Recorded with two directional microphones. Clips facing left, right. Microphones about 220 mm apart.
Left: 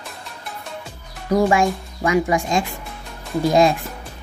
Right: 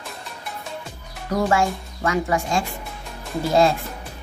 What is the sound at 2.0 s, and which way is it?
A child's voice, 15° left (ahead or behind).